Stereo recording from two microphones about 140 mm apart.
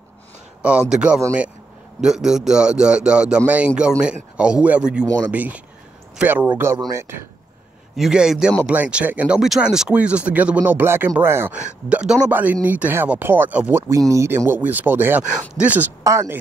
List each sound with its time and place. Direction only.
0.6 s speech: 10° right (ahead or behind)
7.9 s speech: 5° right (ahead or behind)
16.0 s speech: 20° right (ahead or behind)